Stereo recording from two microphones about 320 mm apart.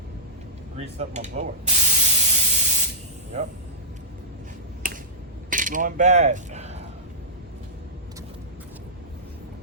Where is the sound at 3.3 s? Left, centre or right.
Right.